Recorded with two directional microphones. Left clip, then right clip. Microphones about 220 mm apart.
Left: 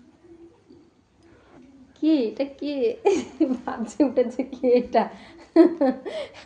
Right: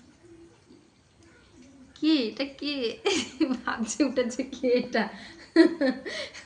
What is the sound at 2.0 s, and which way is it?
A woman's voice, 25° right (ahead or behind).